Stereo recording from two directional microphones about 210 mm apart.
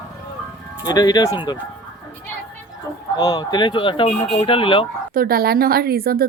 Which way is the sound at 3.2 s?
20° left (ahead or behind).